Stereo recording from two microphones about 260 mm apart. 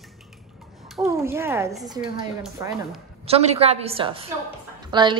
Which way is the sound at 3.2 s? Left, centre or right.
Right.